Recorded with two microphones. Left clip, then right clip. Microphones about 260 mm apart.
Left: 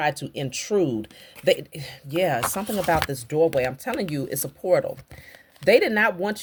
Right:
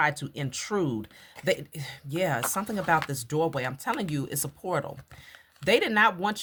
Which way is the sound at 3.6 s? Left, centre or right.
Right.